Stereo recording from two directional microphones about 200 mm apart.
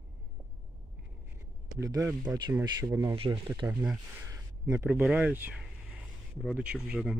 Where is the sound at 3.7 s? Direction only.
5° right (ahead or behind).